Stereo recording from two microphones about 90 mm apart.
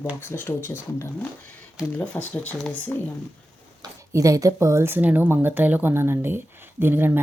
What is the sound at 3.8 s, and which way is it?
Speech, 40° right (ahead or behind).